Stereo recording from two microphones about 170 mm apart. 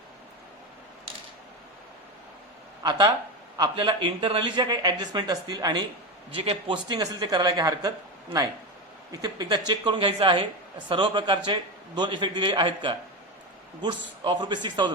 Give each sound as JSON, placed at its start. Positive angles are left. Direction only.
{"t": 3.6, "sound": "speech", "side_deg": -25}